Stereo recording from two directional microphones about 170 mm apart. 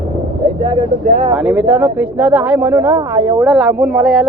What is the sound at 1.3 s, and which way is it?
Speech, 5° right (ahead or behind).